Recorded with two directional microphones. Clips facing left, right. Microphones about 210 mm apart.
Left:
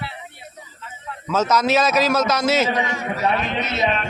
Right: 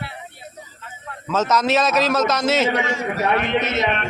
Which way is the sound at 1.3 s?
Centre (ahead or behind).